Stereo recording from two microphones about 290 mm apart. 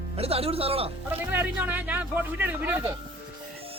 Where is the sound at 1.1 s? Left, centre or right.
Centre.